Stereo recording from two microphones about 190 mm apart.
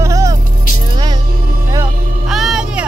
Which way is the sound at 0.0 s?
15° right (ahead or behind).